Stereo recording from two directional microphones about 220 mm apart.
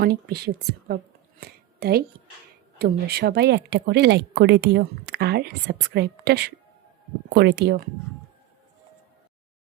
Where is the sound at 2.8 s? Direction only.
45° right (ahead or behind).